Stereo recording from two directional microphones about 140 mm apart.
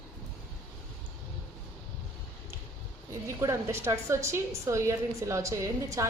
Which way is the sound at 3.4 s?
20° right (ahead or behind).